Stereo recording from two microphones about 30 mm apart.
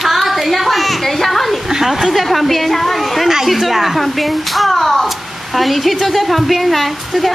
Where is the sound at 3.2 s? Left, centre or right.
Centre.